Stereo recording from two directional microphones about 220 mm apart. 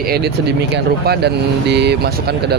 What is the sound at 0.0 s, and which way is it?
Speech, 45° right (ahead or behind).